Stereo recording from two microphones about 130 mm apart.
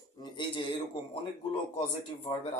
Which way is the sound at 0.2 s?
40° left (ahead or behind).